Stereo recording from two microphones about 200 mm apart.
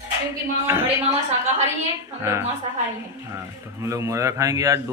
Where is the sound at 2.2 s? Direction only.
15° right (ahead or behind).